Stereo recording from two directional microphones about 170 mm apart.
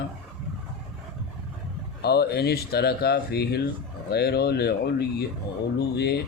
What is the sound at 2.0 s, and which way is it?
Speech, 70° left (ahead or behind).